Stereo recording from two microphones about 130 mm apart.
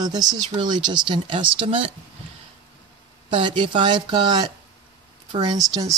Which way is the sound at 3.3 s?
40° right (ahead or behind).